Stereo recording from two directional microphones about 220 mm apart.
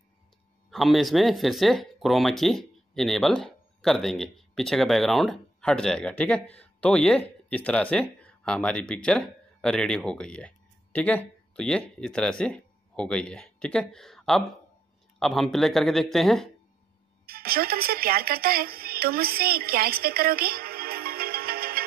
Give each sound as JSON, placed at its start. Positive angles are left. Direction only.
{"t": 0.7, "sound": "speech", "side_deg": 0}
{"t": 17.3, "sound": "a woman's voice", "side_deg": -45}